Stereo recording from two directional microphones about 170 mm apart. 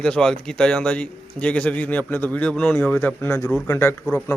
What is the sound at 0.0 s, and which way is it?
Speech, 5° left (ahead or behind).